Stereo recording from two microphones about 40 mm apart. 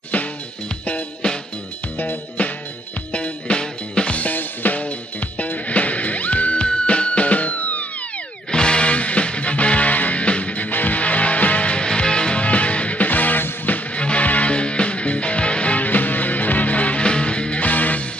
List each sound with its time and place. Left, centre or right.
2.0 s music: left
3.1 s music: left
4.6 s music: left
5.4 s music: left
8.5 s music: left
10.7 s music: left
13.9 s music: left
17.6 s music: left